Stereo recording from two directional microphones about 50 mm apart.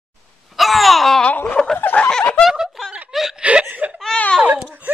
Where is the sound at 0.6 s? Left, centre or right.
Centre.